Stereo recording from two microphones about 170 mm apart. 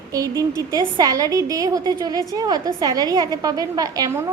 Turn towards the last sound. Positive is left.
turn(degrees=-20)  # may be behind; listen again after turning